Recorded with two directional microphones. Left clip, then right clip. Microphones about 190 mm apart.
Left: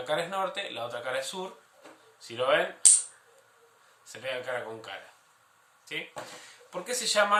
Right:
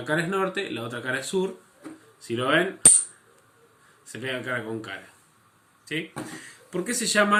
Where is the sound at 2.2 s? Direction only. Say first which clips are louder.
Right 2 dB; 20° left (ahead or behind).